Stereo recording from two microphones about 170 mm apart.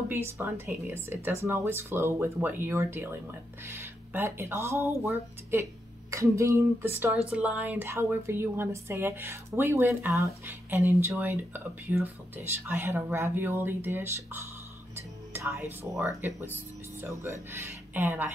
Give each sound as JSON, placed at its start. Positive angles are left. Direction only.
{"t": 0.1, "sound": "a woman's voice", "side_deg": -15}
{"t": 15.0, "sound": "music", "side_deg": -15}
{"t": 16.0, "sound": "a woman's voice", "side_deg": -15}